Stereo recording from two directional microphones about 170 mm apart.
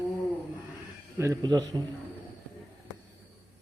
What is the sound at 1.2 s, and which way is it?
Speech, 20° right (ahead or behind).